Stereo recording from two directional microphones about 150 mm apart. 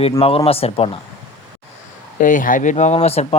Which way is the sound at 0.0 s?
40° left (ahead or behind).